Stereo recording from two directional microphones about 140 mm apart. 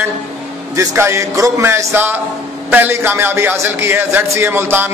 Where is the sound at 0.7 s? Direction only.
20° right (ahead or behind).